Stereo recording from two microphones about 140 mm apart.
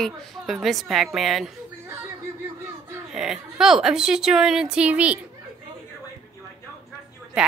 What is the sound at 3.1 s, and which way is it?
A woman's voice, 5° right (ahead or behind).